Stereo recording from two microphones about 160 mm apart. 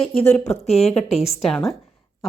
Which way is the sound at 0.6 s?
40° left (ahead or behind).